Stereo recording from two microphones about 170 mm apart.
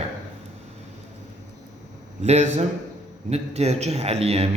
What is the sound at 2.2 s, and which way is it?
A man's voice, 40° right (ahead or behind).